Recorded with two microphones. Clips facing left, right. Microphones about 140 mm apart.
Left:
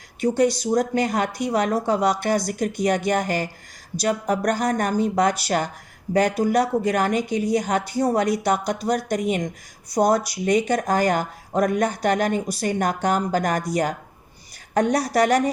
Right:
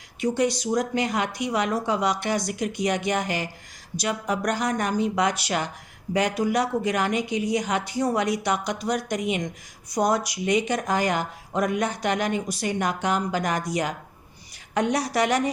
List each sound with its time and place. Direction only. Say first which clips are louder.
0.6 s speech: left 3 dB; 35° left (ahead or behind)